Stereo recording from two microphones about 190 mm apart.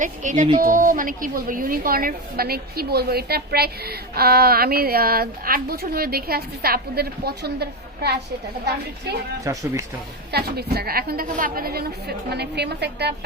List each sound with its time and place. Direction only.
0.0 s a woman's voice: 40° right (ahead or behind); by 8.1 s 60° right (ahead or behind)
9.4 s speech: 15° right (ahead or behind)
10.3 s a woman's voice: 60° right (ahead or behind)